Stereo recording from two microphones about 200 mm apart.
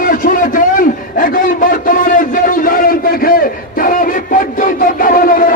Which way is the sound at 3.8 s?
45° left (ahead or behind).